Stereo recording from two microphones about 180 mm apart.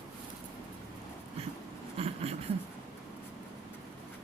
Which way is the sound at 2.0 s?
35° right (ahead or behind).